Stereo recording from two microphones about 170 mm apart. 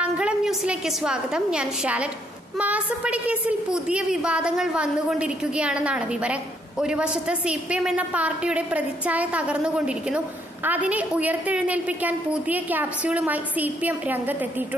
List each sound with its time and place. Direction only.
0.0 s a woman's voice: 5° right (ahead or behind)